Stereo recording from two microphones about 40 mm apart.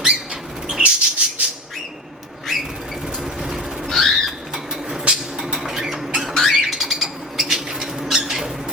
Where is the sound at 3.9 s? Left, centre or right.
Centre.